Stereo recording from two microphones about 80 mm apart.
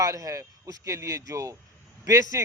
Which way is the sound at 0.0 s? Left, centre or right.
Right.